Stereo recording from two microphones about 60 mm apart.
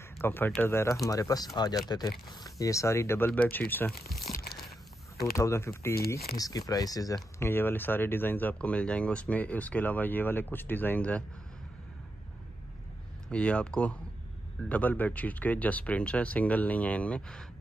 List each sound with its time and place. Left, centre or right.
0.2 s speech: left
0.6 s speech: left
1.0 s speech: left
3.4 s speech: left
5.2 s speech: left
6.3 s speech: left
7.3 s speech: left
11.0 s speech: left
13.3 s speech: centre
14.7 s speech: left